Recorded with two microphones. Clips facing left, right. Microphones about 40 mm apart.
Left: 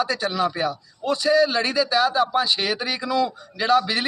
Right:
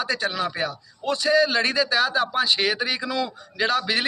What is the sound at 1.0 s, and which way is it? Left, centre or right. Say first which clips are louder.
A man's voice: left 1 dB; right.